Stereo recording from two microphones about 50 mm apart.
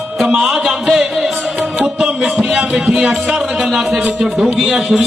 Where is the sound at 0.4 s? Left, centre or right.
Centre.